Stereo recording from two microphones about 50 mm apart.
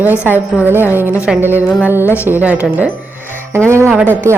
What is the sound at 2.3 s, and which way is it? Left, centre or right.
Speech, right.